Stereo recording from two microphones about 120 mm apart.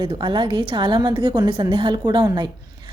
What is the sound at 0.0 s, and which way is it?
A woman's voice, 40° right (ahead or behind).